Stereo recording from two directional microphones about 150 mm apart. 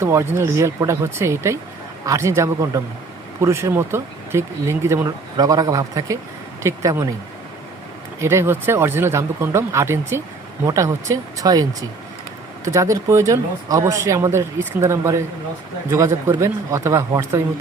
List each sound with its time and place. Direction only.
0.0 s speech: 20° right (ahead or behind)
8.2 s speech: 15° right (ahead or behind)